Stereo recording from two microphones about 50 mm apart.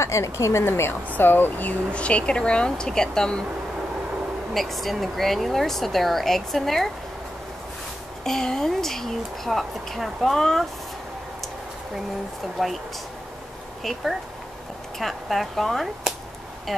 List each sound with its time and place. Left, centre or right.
0.0 s a woman's voice: left
1.1 s speech: left
1.9 s speech: left
4.6 s speech: centre
8.2 s speech: centre
12.6 s speech: centre
15.0 s speech: centre